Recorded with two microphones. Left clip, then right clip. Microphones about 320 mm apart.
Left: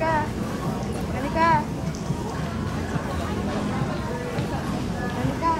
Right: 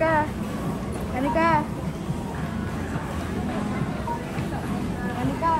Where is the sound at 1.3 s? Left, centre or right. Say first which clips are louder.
Left 1 dB; right.